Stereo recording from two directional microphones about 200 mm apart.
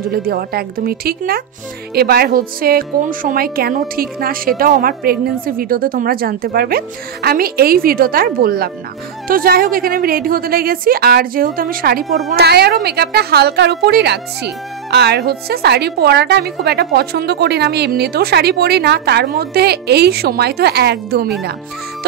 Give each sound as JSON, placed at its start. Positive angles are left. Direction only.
{"t": 0.1, "sound": "a woman's voice", "side_deg": -50}